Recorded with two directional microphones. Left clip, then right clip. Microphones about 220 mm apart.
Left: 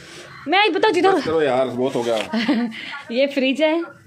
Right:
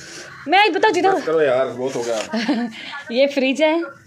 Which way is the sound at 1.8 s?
50° left (ahead or behind).